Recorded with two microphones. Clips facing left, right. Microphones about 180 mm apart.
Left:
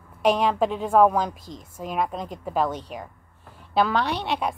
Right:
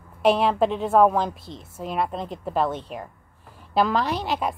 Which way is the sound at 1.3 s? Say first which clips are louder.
Even; 45° left (ahead or behind).